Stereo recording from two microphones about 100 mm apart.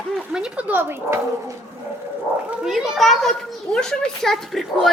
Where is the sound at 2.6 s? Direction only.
5° right (ahead or behind).